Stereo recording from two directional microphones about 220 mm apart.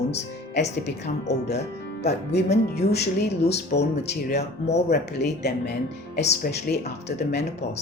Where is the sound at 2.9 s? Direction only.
50° left (ahead or behind).